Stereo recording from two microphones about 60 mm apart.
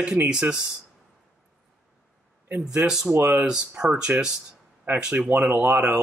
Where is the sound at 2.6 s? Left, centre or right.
Centre.